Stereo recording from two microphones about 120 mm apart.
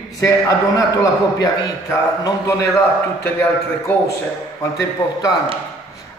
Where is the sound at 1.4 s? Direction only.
30° left (ahead or behind).